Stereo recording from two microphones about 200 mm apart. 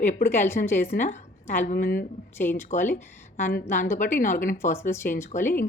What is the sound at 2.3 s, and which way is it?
Speech, 10° left (ahead or behind).